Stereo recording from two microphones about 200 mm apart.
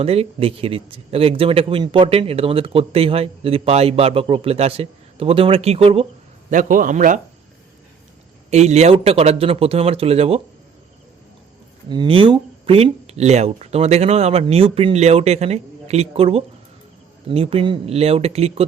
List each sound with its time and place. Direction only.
0.0 s speech: 30° right (ahead or behind)
6.5 s speech: 40° right (ahead or behind)
8.4 s speech: 35° right (ahead or behind)
11.9 s speech: 25° right (ahead or behind)